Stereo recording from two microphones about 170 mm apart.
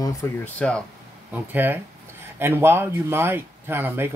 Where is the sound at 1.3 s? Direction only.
10° right (ahead or behind).